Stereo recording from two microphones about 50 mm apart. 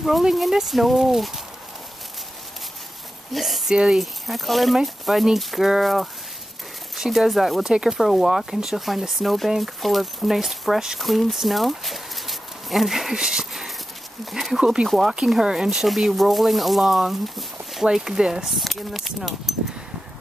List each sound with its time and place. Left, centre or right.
0.0 s speech: centre
3.3 s speech: centre
3.7 s speech: centre
4.0 s speech: centre
7.7 s speech: centre
14.9 s speech: centre